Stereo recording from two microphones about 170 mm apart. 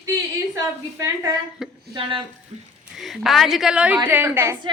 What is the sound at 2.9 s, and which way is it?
A woman's voice, centre (ahead or behind).